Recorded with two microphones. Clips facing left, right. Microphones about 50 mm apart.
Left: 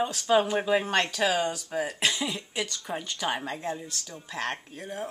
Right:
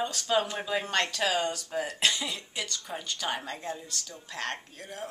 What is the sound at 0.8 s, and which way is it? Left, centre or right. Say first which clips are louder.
Speech: left 3 dB; centre.